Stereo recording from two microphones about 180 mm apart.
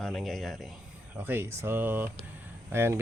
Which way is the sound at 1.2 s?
10° right (ahead or behind).